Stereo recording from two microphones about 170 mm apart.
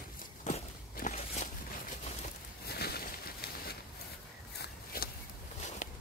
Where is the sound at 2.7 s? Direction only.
65° left (ahead or behind).